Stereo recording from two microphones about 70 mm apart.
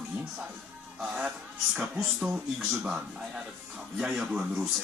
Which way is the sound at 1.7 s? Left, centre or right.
Centre.